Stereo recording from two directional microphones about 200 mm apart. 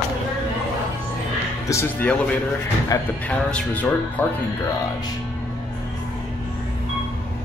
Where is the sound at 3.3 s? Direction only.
5° left (ahead or behind).